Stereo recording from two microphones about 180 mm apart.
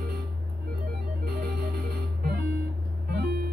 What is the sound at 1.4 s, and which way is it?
Music, 70° right (ahead or behind).